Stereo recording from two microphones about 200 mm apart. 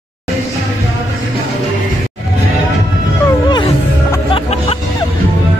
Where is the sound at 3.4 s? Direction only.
20° left (ahead or behind).